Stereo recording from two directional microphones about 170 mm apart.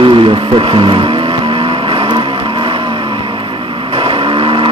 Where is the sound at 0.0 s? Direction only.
30° right (ahead or behind).